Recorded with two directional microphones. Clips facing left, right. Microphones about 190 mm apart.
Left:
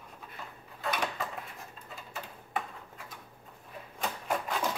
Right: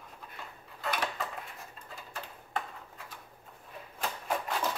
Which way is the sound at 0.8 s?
Centre (ahead or behind).